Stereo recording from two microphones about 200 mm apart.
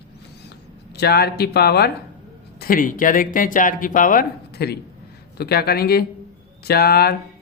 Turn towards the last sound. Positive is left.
turn(degrees=50)  # may be behind; listen again after turning